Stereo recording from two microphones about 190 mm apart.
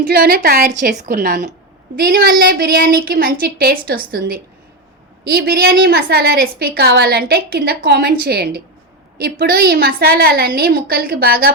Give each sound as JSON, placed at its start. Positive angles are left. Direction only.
{"t": 0.1, "sound": "a woman's voice", "side_deg": -50}